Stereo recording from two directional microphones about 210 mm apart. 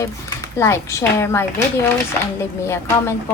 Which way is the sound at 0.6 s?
15° left (ahead or behind).